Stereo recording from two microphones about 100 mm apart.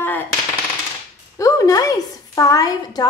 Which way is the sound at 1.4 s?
35° left (ahead or behind).